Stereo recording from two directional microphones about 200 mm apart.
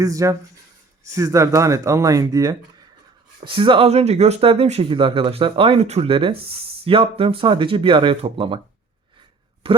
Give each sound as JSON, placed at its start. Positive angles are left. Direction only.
{"t": 0.0, "sound": "speech", "side_deg": -15}
{"t": 9.6, "sound": "speech", "side_deg": -30}